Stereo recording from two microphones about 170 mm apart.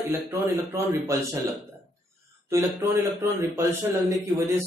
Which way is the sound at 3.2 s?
15° right (ahead or behind).